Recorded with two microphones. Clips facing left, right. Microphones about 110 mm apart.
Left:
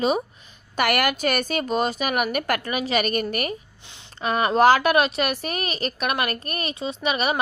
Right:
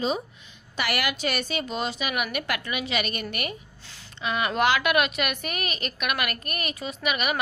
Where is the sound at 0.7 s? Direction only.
50° left (ahead or behind).